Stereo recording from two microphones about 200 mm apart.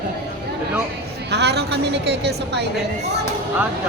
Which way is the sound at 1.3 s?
55° right (ahead or behind).